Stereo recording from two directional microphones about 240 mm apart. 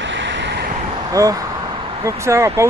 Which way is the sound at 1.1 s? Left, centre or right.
Centre.